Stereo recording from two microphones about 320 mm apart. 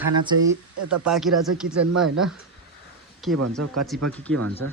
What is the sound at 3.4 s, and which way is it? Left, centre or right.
Speech, right.